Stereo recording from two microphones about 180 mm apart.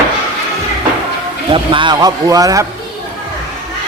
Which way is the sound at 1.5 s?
30° right (ahead or behind).